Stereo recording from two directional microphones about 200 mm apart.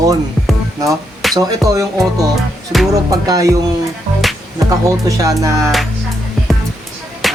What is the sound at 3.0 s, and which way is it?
Music, 15° right (ahead or behind).